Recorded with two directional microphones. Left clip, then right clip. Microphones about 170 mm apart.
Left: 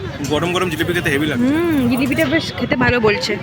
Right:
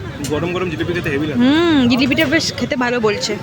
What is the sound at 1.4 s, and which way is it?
Speech, 20° right (ahead or behind).